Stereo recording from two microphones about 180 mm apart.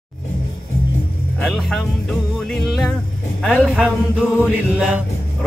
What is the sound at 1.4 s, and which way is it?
Speech, centre (ahead or behind).